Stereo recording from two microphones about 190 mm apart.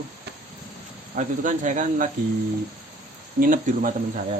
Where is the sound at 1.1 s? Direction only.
45° right (ahead or behind).